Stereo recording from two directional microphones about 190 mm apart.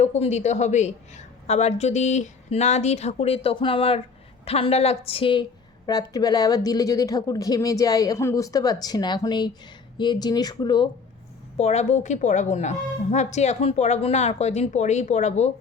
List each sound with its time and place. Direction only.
0.0 s a woman's voice: 35° left (ahead or behind)
11.5 s a woman's voice: 35° left (ahead or behind)